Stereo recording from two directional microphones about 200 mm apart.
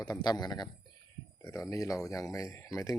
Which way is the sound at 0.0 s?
20° left (ahead or behind).